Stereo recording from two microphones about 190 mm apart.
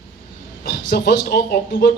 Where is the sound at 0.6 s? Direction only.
60° left (ahead or behind).